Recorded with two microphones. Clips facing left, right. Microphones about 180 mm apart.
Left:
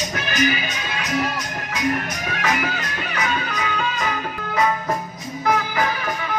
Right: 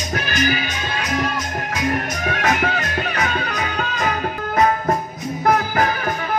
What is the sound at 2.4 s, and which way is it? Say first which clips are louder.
Music: right 3 dB; 45° right (ahead or behind).